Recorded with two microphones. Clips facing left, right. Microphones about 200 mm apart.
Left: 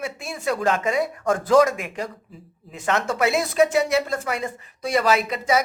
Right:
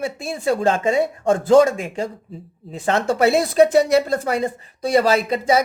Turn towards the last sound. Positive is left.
turn(degrees=-35)  # may be behind; listen again after turning